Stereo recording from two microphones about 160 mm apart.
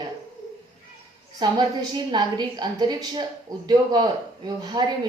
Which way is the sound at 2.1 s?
25° right (ahead or behind).